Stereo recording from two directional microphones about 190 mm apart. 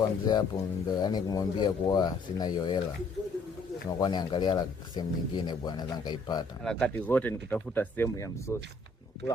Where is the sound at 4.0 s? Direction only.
20° left (ahead or behind).